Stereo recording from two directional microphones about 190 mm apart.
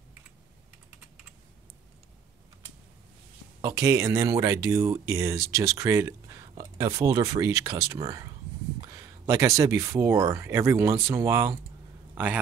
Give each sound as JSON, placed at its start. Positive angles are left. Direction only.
{"t": 3.6, "sound": "speech", "side_deg": -15}